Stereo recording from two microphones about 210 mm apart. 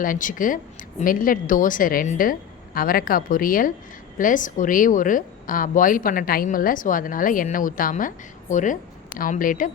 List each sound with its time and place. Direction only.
0.0 s a woman's voice: 40° left (ahead or behind)